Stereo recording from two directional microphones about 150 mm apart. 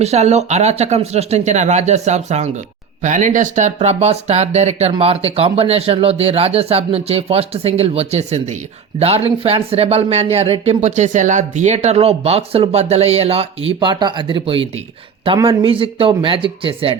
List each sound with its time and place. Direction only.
0.0 s speech: 45° right (ahead or behind)
13.7 s speech: 30° right (ahead or behind)